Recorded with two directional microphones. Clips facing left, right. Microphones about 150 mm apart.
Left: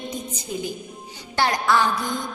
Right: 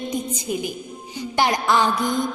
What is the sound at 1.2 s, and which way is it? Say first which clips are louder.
Speech: right 2 dB; 15° right (ahead or behind).